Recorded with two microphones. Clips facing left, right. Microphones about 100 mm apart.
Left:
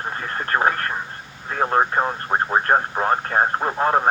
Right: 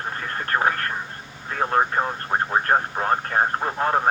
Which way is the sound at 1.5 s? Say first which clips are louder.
Left 2 dB; 25° left (ahead or behind).